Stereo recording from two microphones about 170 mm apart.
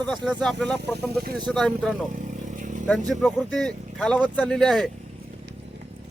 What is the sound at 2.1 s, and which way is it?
Vehicle, 45° right (ahead or behind).